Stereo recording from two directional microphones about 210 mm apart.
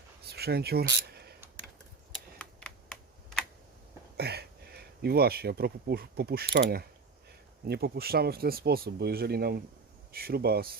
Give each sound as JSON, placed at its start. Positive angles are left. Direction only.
{"t": 0.3, "sound": "a sound", "side_deg": -50}
{"t": 2.1, "sound": "typing", "side_deg": 5}
{"t": 4.2, "sound": "speech", "side_deg": -50}